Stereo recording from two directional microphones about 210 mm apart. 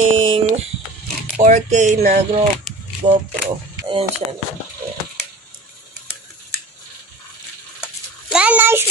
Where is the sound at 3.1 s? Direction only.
25° right (ahead or behind).